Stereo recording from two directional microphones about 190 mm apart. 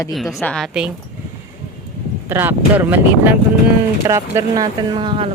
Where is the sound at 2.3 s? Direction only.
10° right (ahead or behind); by 5.3 s 25° right (ahead or behind).